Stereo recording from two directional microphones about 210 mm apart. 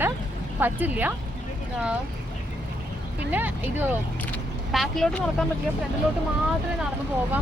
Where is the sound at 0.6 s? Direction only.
10° right (ahead or behind).